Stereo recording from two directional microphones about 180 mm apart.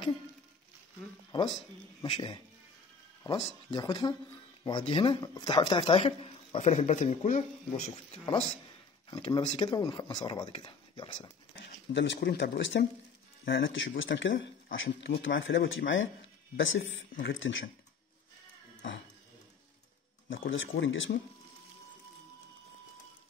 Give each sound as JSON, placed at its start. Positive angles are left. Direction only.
{"t": 1.3, "sound": "speech", "side_deg": 25}
{"t": 11.9, "sound": "speech", "side_deg": 80}
{"t": 13.5, "sound": "speech", "side_deg": 90}
{"t": 20.2, "sound": "speech", "side_deg": 90}